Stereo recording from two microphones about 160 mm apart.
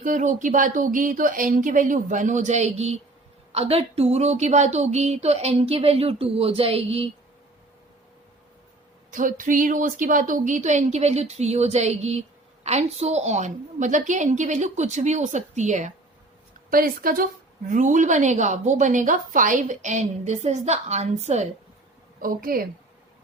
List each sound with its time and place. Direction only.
0.0 s a woman's voice: 55° right (ahead or behind); by 7.1 s 35° right (ahead or behind)
9.0 s a woman's voice: 55° right (ahead or behind)
16.6 s speech: 65° right (ahead or behind)
17.7 s a woman's voice: 50° right (ahead or behind)
22.2 s speech: 65° right (ahead or behind)